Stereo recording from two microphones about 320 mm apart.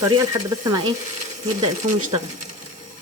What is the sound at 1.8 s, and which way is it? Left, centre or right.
Speech, right.